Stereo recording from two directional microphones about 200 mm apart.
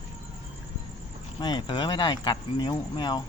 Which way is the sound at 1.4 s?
20° left (ahead or behind).